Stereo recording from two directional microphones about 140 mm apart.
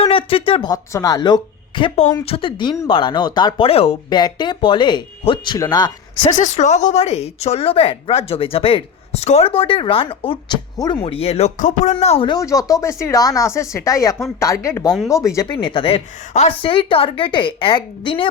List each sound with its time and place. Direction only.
0.0 s a sound: 40° left (ahead or behind)
0.7 s a woman's voice: 25° left (ahead or behind); by 4.2 s 45° left (ahead or behind)
4.2 s a woman's voice: 30° left (ahead or behind)
6.4 s speech: 55° left (ahead or behind); by 10.3 s 40° left (ahead or behind)
10.8 s speech: 25° left (ahead or behind)
11.0 s speech: 45° left (ahead or behind)
12.3 s speech: 25° left (ahead or behind)
15.5 s a woman's voice: 40° left (ahead or behind)
16.3 s a woman's voice: 50° left (ahead or behind)